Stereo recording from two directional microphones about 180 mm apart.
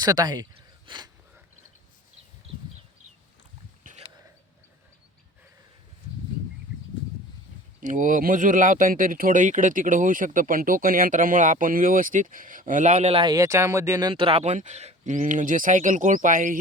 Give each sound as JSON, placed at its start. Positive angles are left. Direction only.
{"t": 0.0, "sound": "speech", "side_deg": -20}
{"t": 3.9, "sound": "a sound", "side_deg": -50}
{"t": 7.8, "sound": "speech", "side_deg": -45}